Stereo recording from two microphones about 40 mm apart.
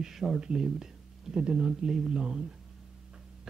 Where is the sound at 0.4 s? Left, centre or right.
Centre.